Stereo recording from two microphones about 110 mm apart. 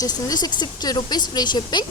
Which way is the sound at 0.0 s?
35° left (ahead or behind).